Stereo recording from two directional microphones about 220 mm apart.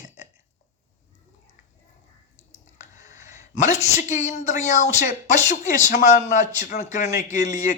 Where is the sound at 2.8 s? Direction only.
35° left (ahead or behind).